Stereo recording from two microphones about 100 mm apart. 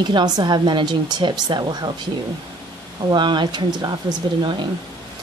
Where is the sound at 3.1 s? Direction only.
50° right (ahead or behind).